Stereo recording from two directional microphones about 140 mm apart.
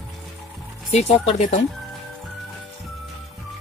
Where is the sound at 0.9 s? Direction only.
50° left (ahead or behind).